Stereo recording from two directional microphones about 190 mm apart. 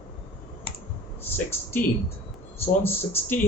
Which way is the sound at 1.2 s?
10° left (ahead or behind).